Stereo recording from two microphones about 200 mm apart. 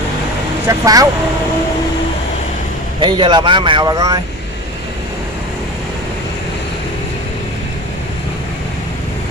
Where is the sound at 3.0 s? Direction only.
25° right (ahead or behind).